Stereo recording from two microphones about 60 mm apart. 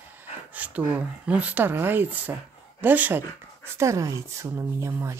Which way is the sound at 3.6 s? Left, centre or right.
Right.